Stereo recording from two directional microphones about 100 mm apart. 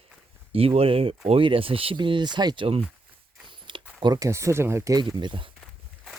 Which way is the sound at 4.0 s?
45° right (ahead or behind).